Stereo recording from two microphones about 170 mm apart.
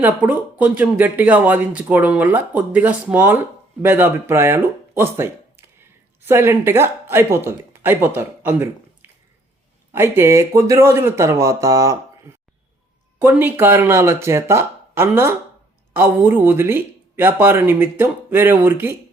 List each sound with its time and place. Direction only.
0.0 s speech: 10° right (ahead or behind)